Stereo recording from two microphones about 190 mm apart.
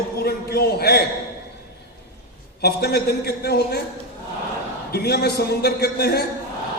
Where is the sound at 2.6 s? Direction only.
55° left (ahead or behind).